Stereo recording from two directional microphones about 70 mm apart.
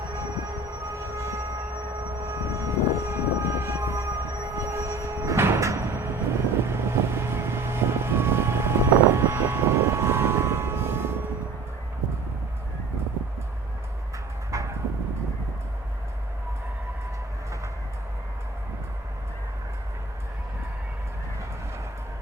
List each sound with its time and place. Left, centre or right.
0.9 s train: right
2.2 s vehicle: right
14.5 s a sound: right